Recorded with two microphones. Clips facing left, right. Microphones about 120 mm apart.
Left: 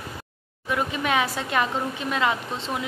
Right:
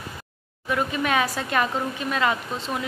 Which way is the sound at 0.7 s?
15° left (ahead or behind).